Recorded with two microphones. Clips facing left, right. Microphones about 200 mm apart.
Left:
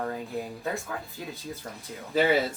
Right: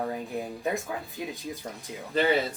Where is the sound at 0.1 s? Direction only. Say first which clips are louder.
Right 1 dB; 15° right (ahead or behind).